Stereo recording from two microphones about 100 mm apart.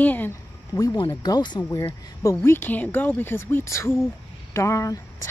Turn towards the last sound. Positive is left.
turn(degrees=30)  # may be behind; listen again after turning